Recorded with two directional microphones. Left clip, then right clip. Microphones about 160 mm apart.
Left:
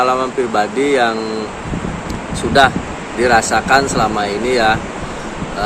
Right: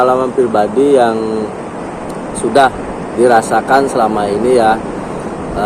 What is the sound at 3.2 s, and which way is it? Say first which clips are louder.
Speech: right 3 dB; 35° left (ahead or behind).